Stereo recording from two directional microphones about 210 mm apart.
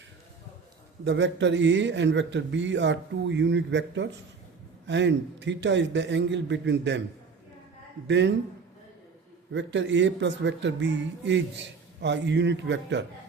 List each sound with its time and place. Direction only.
1.0 s speech: 60° right (ahead or behind)
8.0 s speech: 60° right (ahead or behind)
9.5 s speech: 60° right (ahead or behind)